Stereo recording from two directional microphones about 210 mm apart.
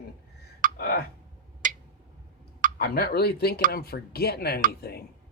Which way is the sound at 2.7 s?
45° left (ahead or behind).